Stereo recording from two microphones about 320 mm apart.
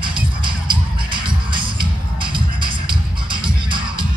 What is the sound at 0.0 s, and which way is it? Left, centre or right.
Music, centre.